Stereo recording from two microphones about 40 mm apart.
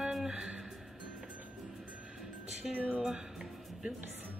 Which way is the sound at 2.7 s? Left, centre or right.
Right.